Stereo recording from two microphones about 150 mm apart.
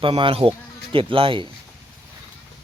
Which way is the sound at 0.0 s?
35° right (ahead or behind).